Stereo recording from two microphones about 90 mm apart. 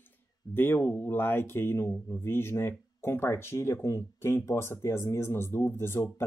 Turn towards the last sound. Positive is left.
turn(degrees=30)  # may be behind; listen again after turning